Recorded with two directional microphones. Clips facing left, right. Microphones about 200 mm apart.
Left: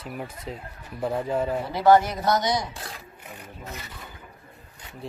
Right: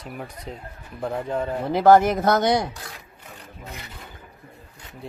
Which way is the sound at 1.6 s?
50° right (ahead or behind).